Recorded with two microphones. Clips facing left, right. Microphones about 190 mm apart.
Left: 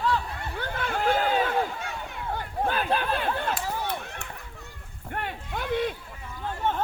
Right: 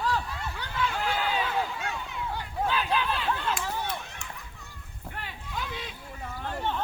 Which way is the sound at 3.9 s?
55° left (ahead or behind).